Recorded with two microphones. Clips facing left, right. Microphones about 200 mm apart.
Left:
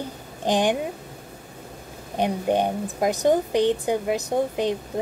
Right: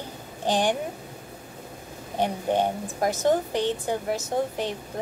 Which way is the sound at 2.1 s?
15° left (ahead or behind).